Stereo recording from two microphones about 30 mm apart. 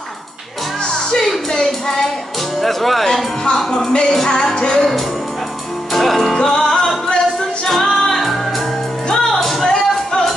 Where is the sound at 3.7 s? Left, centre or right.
Left.